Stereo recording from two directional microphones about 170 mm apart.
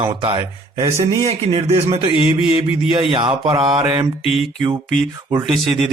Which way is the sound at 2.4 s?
30° left (ahead or behind).